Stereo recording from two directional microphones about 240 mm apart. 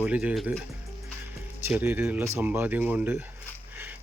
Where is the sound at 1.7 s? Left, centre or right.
Centre.